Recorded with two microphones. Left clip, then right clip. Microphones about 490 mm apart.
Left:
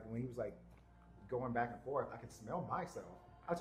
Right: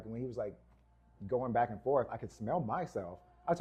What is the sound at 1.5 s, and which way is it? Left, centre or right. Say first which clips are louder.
Speech: right 9 dB; right.